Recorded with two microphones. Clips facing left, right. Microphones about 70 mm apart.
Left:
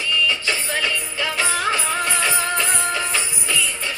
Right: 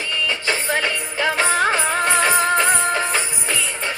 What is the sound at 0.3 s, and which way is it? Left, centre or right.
Music, right.